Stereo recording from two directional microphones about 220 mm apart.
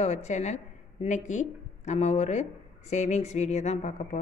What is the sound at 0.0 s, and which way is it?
A woman's voice, 30° left (ahead or behind).